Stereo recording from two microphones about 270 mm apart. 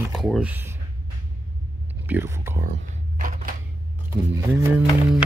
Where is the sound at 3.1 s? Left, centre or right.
Right.